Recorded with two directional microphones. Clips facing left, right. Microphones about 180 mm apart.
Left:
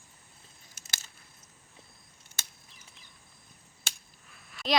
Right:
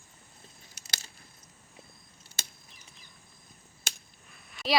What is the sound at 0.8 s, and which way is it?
Keys jangling, 45° left (ahead or behind).